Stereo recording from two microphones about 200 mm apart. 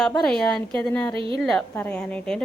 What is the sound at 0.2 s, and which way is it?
A woman's voice, 5° left (ahead or behind).